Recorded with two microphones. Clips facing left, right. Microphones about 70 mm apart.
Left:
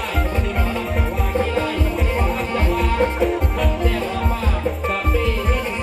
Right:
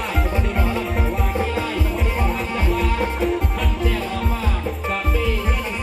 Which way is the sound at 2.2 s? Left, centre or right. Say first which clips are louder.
Left 2 dB; centre.